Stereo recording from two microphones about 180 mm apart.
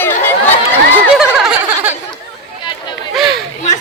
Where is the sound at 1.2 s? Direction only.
5° right (ahead or behind).